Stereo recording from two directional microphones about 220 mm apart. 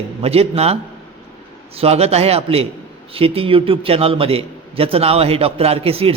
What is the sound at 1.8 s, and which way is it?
A man's voice, 30° right (ahead or behind).